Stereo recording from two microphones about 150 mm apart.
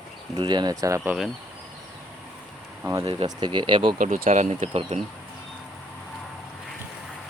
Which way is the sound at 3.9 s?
65° right (ahead or behind).